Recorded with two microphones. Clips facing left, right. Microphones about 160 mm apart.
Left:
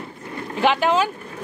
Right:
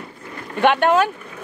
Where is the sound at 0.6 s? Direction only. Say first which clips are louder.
Right 3 dB; 60° right (ahead or behind).